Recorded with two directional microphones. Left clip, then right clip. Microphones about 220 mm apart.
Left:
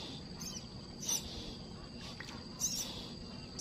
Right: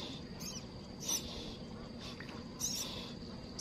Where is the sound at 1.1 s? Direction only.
5° left (ahead or behind).